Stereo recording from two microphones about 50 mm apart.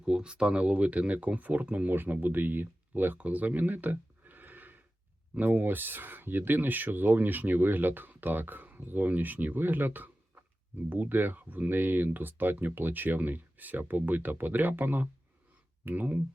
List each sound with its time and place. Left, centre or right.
0.0 s speech: centre; by 3.2 s right
3.2 s a sound: right
5.3 s speech: right